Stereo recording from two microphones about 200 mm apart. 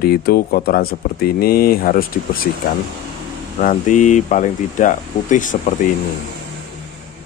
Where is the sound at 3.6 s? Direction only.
40° left (ahead or behind).